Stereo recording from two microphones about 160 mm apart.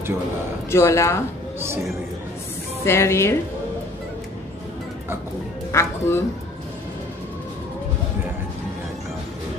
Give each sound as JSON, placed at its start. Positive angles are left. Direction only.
{"t": 0.7, "sound": "speech", "side_deg": 15}
{"t": 1.6, "sound": "speech", "side_deg": -15}
{"t": 2.8, "sound": "speech", "side_deg": 15}
{"t": 5.7, "sound": "speech", "side_deg": 15}